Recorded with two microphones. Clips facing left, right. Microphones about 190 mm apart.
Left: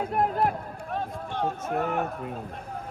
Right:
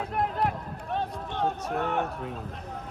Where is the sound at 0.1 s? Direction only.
45° left (ahead or behind).